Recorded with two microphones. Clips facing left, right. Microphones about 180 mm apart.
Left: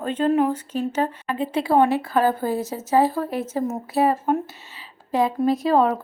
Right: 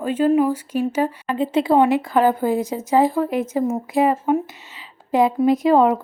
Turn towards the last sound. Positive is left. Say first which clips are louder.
# right 4 dB
turn(degrees=-20)  # may be behind; listen again after turning